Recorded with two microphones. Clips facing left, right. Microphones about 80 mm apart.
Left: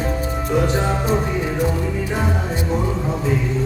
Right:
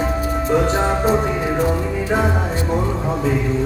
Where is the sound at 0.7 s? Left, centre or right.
Right.